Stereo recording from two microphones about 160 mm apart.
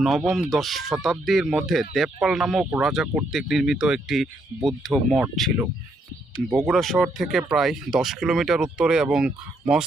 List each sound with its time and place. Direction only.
0.0 s speech: centre (ahead or behind)